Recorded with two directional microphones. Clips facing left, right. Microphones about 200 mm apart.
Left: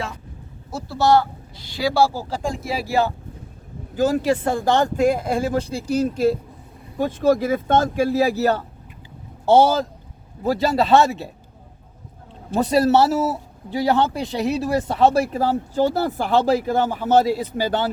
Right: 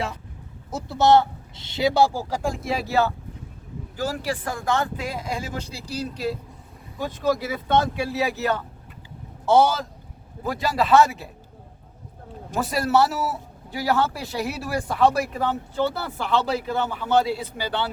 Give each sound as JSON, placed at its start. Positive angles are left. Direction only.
{"t": 0.7, "sound": "speech", "side_deg": -20}
{"t": 2.5, "sound": "speech", "side_deg": 10}
{"t": 12.7, "sound": "a man's voice", "side_deg": 30}